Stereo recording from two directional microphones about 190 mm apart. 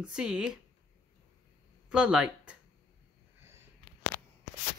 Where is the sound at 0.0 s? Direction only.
5° right (ahead or behind).